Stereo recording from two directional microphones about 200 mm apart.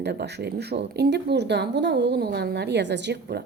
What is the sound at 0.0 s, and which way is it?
Speech, 55° right (ahead or behind).